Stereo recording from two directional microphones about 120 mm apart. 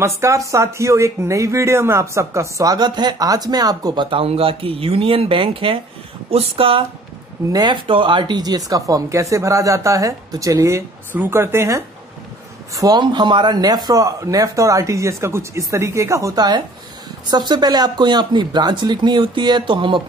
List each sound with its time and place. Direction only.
0.0 s speech: 25° right (ahead or behind); by 6.8 s 50° right (ahead or behind)
7.5 s speech: 40° right (ahead or behind); by 11.8 s 20° right (ahead or behind)
12.7 s speech: 35° right (ahead or behind)